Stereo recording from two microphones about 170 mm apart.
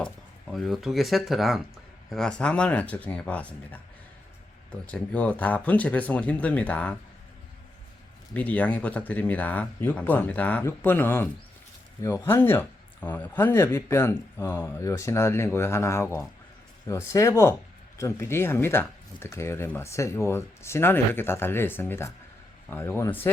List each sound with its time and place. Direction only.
0.5 s speech: centre (ahead or behind)
8.3 s speech: 10° left (ahead or behind)